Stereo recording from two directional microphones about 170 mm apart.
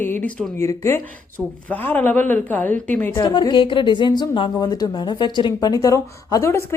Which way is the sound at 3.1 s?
25° left (ahead or behind).